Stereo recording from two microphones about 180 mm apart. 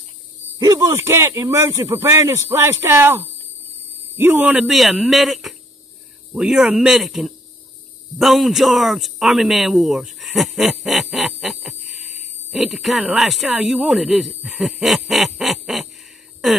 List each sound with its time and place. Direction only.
0.6 s a man's voice: 20° right (ahead or behind); by 15.9 s centre (ahead or behind)